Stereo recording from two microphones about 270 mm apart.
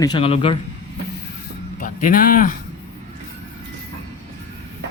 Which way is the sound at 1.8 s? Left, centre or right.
Left.